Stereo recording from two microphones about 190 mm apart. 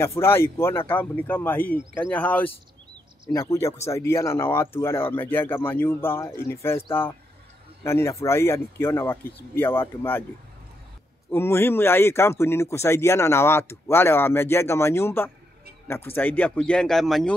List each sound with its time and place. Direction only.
0.0 s speech: 15° left (ahead or behind)
11.2 s speech: 10° left (ahead or behind)